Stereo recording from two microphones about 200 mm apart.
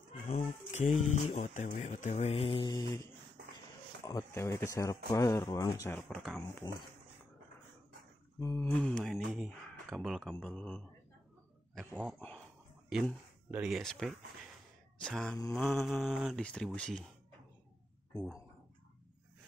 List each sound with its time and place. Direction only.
0.4 s speech: 30° left (ahead or behind); by 6.4 s centre (ahead or behind)
6.4 s speech: 20° left (ahead or behind)
8.4 s speech: 15° left (ahead or behind)